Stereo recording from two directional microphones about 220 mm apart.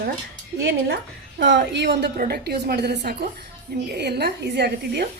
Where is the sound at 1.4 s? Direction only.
55° right (ahead or behind).